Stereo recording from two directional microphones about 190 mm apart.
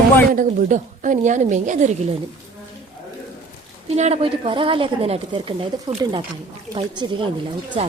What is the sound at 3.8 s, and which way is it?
A woman's voice, 35° right (ahead or behind).